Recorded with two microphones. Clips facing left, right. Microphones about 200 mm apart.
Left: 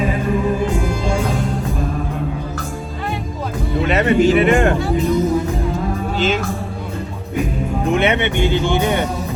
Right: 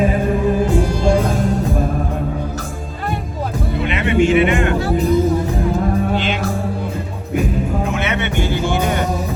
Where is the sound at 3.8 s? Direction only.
40° left (ahead or behind).